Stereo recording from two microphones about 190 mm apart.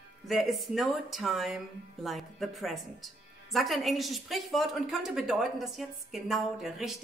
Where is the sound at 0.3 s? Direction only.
Centre (ahead or behind).